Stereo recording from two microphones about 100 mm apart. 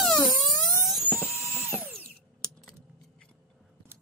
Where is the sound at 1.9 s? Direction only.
10° left (ahead or behind).